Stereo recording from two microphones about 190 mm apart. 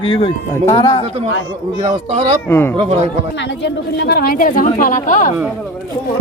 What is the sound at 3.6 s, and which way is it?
Speech, 60° left (ahead or behind).